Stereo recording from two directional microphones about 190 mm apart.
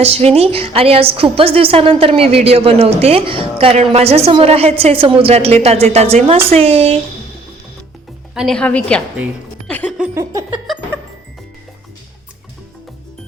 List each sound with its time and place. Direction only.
0.0 s a woman's voice: 30° right (ahead or behind)
8.4 s a woman's voice: 5° left (ahead or behind)
9.6 s music: 5° left (ahead or behind)
10.2 s a sound: 15° right (ahead or behind)